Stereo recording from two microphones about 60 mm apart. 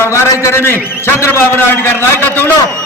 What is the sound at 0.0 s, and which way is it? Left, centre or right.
A man's voice, left.